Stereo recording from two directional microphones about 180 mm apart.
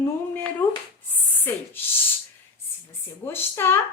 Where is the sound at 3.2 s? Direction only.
10° left (ahead or behind).